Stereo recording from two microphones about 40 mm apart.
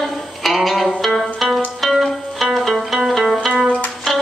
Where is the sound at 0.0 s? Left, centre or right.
Centre.